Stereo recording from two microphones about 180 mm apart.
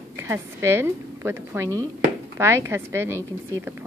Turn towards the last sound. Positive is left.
turn(degrees=-15)  # may be behind; listen again after turning